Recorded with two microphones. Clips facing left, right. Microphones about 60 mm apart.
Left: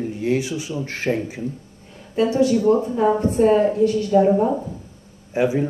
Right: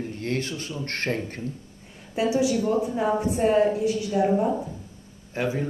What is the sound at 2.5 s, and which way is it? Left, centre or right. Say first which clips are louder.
Speech: left 7 dB; left.